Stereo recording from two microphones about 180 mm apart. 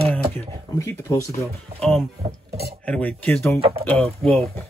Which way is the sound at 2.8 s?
10° left (ahead or behind).